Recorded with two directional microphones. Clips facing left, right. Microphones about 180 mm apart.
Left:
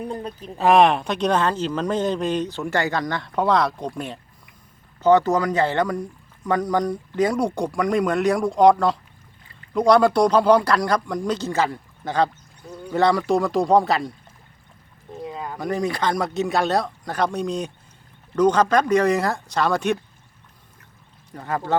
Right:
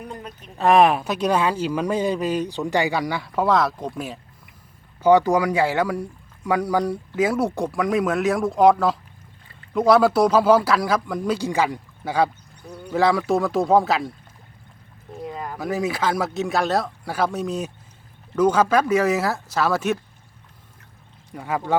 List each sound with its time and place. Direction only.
0.0 s speech: 30° left (ahead or behind)
0.5 s speech: centre (ahead or behind)
15.1 s speech: centre (ahead or behind)
21.3 s speech: 10° right (ahead or behind)